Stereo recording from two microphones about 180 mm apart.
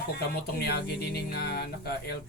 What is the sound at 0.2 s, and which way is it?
Speech, 60° left (ahead or behind).